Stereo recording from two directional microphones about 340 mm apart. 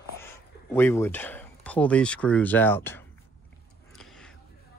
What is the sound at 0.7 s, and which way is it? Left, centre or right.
Speech, centre.